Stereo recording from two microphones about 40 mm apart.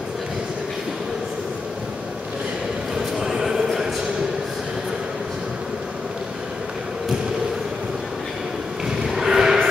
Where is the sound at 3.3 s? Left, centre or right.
Centre.